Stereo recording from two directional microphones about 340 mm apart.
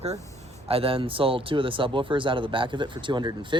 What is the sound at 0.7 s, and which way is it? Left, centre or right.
Speech, centre.